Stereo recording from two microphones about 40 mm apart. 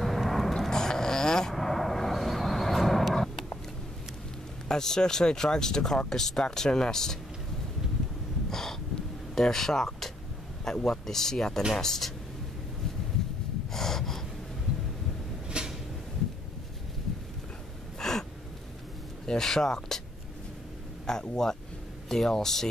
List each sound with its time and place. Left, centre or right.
0.0 s vehicle: centre
4.6 s speech: centre
8.5 s a sound: centre
9.3 s speech: centre
13.7 s gasp: centre
15.5 s cupboard open or close: right
17.9 s gasp: centre
19.2 s speech: centre
21.1 s speech: centre